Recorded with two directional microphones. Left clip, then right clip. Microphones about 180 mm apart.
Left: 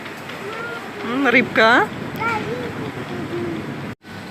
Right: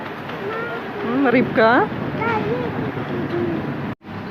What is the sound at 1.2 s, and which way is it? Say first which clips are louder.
Speech: left 2 dB; 10° left (ahead or behind).